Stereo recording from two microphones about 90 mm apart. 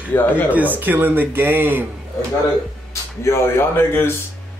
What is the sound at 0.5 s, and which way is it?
Speech, 20° right (ahead or behind).